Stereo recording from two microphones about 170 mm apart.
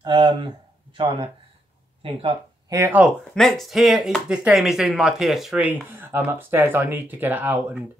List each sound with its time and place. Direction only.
0.0 s speech: 30° right (ahead or behind)
2.7 s speech: 15° right (ahead or behind)
3.0 s speech: centre (ahead or behind)